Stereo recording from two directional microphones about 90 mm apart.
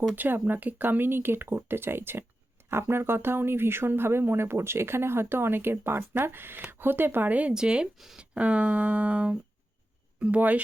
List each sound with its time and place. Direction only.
0.2 s speech: 20° right (ahead or behind)